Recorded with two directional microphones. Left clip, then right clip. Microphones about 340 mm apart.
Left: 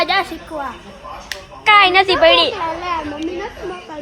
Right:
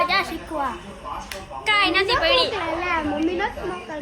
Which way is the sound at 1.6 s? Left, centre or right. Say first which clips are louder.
Left 9 dB; left.